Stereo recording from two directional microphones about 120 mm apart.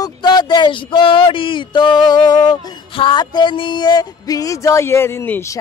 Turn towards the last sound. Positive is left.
turn(degrees=20)  # may be behind; listen again after turning